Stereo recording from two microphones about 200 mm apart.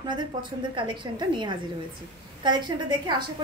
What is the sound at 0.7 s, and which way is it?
A woman's voice, 25° right (ahead or behind).